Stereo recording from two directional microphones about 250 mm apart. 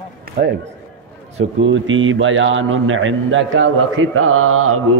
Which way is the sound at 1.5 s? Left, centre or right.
Right.